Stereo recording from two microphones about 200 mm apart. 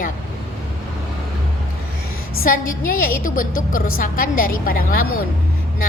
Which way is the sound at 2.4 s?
45° left (ahead or behind).